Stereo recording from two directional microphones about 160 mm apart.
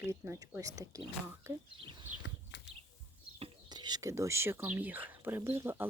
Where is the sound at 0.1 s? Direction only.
15° right (ahead or behind).